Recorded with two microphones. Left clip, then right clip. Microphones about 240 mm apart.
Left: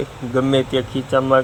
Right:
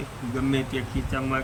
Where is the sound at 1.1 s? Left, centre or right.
Left.